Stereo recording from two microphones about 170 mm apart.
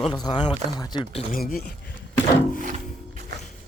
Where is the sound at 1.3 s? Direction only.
60° left (ahead or behind).